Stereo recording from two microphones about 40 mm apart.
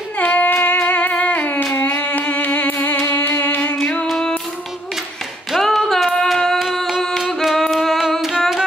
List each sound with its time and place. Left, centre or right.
0.2 s singing: left
0.8 s music: left
3.8 s music: left
5.5 s female singing: centre
6.7 s a sound: centre
7.4 s singing: centre